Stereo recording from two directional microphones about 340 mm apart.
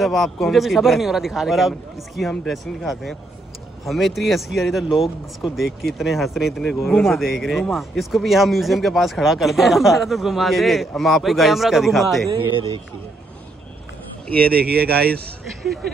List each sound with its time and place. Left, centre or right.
0.0 s speech: centre
12.3 s speech: centre
14.2 s speech: centre
14.5 s a man's voice: right
15.6 s speech: centre